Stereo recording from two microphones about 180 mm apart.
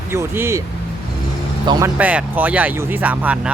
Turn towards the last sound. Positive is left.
turn(degrees=-10)  # may be behind; listen again after turning